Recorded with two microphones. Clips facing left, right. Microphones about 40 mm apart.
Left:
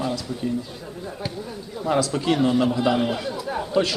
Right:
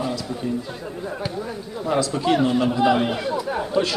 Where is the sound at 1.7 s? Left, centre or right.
Centre.